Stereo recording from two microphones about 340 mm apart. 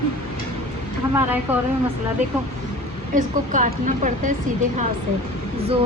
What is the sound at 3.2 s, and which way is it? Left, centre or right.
A woman's voice, right.